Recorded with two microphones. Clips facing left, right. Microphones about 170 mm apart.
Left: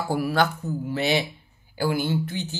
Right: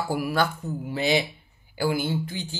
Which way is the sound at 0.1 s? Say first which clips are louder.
Left 3 dB; 10° right (ahead or behind).